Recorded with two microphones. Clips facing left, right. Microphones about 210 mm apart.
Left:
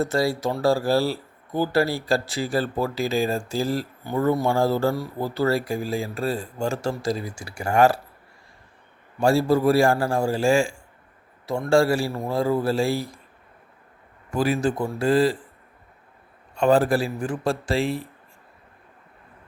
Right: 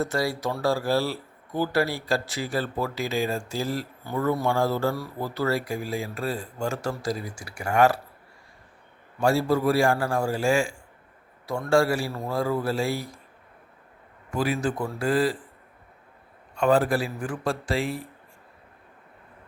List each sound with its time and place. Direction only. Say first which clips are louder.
0.0 s a man's voice: left 4 dB; 25° left (ahead or behind)
9.2 s a man's voice: left 3 dB; 30° left (ahead or behind)
14.3 s a man's voice: left 4 dB; 30° left (ahead or behind)
16.6 s a man's voice: left 3 dB; 30° left (ahead or behind)